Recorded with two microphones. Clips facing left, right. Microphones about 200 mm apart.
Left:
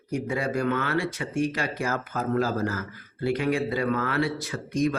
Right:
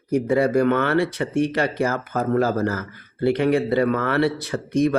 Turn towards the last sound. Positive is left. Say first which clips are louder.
# right 6 dB
turn(degrees=-60)  # may be behind; listen again after turning